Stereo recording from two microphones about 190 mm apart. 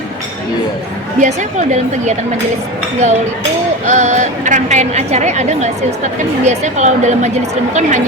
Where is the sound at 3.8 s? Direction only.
40° right (ahead or behind).